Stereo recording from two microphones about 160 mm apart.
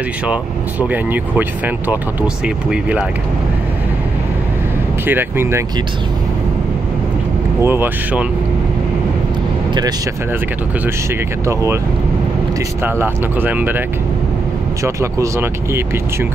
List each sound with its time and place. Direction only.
0.3 s speech: 10° right (ahead or behind)
5.0 s speech: 15° right (ahead or behind)
7.6 s speech: 15° right (ahead or behind)
11.4 s speech: 15° right (ahead or behind)
12.8 s speech: 10° right (ahead or behind)